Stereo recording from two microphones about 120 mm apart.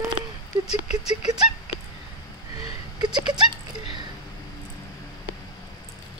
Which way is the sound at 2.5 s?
35° right (ahead or behind).